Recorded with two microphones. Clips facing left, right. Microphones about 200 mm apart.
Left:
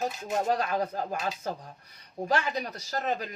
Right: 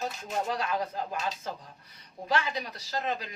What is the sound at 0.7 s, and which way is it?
Speech, 45° left (ahead or behind).